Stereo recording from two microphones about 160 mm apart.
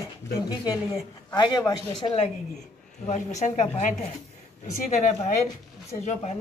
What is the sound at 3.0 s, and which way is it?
Speech, 45° left (ahead or behind).